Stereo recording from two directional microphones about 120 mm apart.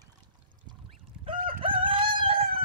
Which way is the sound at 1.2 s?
50° right (ahead or behind).